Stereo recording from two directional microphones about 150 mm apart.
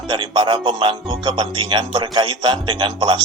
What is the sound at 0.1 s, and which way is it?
Speech, 30° right (ahead or behind).